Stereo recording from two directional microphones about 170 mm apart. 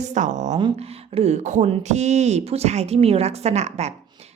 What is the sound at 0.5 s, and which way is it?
Speech, 30° right (ahead or behind).